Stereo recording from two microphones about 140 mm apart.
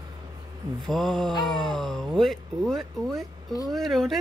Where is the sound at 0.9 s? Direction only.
Centre (ahead or behind).